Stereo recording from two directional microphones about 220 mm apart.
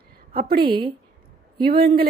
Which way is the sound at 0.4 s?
45° right (ahead or behind).